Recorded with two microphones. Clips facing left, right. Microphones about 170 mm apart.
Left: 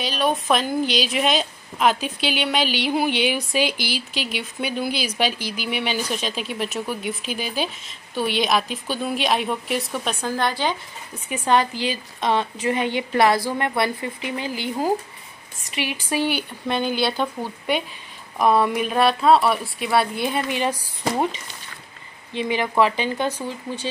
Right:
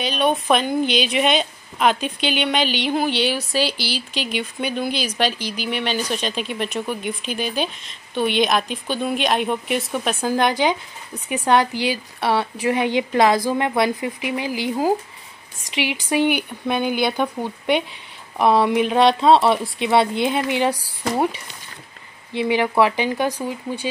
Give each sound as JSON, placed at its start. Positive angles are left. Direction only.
{"t": 0.0, "sound": "speech", "side_deg": 0}
{"t": 10.3, "sound": "a woman's voice", "side_deg": -15}
{"t": 22.3, "sound": "a woman's voice", "side_deg": -15}